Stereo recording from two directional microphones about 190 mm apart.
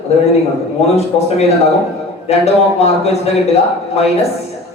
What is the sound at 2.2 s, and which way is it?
Speech, 35° left (ahead or behind).